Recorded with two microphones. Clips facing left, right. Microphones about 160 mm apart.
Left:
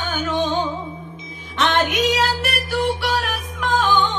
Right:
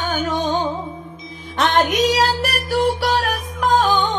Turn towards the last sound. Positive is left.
turn(degrees=-40)  # may be behind; listen again after turning